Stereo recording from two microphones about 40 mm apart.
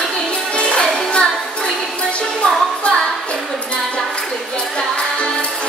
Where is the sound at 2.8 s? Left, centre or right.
Left.